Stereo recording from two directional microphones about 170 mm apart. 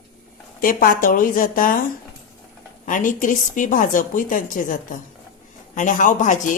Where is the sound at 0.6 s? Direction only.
55° left (ahead or behind).